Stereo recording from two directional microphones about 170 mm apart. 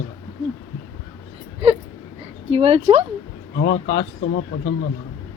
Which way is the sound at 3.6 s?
90° left.